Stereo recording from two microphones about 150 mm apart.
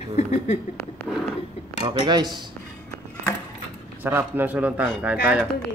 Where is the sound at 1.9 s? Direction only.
30° right (ahead or behind).